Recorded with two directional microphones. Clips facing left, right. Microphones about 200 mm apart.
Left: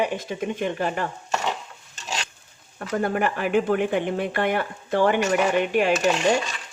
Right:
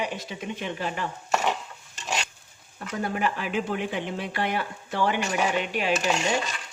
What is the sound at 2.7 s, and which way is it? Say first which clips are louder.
Speech: left 6 dB; 55° left (ahead or behind).